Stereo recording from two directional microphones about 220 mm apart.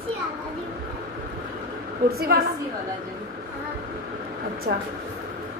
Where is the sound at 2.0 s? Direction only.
45° right (ahead or behind).